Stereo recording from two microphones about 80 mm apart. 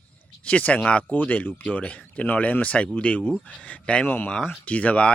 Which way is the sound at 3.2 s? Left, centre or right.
Centre.